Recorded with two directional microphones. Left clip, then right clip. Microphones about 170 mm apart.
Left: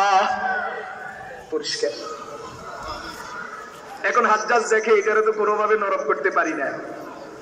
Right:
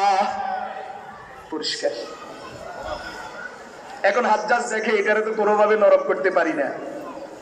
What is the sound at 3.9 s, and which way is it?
A man's voice, 25° right (ahead or behind).